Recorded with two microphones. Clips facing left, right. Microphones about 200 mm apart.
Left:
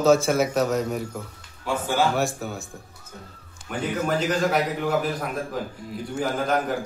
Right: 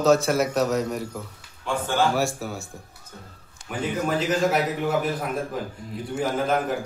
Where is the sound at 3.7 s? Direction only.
Centre (ahead or behind).